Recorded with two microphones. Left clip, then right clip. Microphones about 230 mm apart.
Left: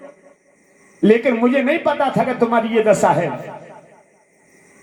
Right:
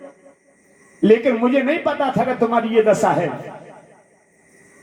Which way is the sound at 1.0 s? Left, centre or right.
Left.